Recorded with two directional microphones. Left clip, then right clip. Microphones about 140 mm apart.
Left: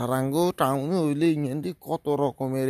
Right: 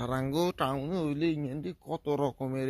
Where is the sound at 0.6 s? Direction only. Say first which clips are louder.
Left 7 dB; 35° left (ahead or behind).